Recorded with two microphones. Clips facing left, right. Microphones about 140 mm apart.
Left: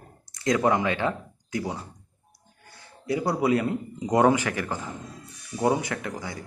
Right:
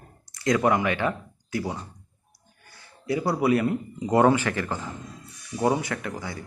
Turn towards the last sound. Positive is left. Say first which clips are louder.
# even
turn(degrees=20)  # may be behind; listen again after turning